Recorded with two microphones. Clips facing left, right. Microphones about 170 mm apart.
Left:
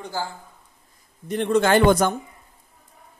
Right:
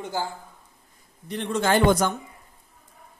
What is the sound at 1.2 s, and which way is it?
Speech, 50° left (ahead or behind).